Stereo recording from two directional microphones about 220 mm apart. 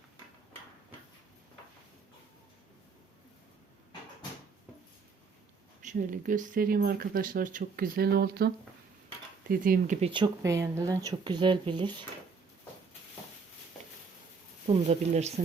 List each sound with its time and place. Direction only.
5.8 s speech: 35° right (ahead or behind)
10.1 s speech: 20° right (ahead or behind)
14.7 s speech: 30° right (ahead or behind)